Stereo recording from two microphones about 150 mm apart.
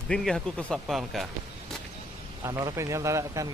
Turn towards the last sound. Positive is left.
turn(degrees=-20)  # may be behind; listen again after turning